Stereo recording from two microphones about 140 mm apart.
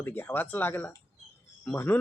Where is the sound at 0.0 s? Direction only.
15° left (ahead or behind).